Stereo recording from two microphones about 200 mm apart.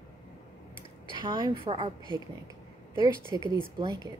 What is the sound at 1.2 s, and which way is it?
A woman's voice, 20° right (ahead or behind).